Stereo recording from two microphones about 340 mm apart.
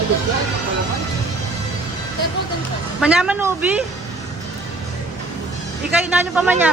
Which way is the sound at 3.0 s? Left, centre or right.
Centre.